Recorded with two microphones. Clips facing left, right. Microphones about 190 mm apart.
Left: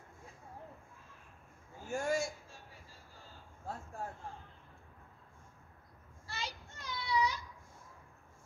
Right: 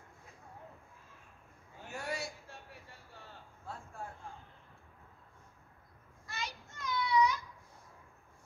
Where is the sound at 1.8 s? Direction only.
45° left (ahead or behind).